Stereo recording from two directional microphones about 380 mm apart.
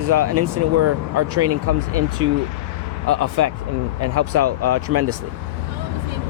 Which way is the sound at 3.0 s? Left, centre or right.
Right.